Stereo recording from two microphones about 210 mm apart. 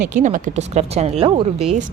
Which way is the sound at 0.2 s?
35° right (ahead or behind).